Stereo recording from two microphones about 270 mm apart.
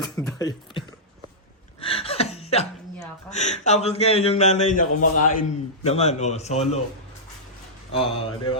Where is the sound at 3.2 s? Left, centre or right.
Left.